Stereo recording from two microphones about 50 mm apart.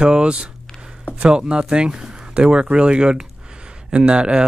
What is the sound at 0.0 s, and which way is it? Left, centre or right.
Speech, centre.